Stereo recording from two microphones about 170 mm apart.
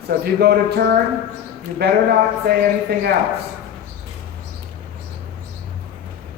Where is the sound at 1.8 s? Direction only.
70° right (ahead or behind).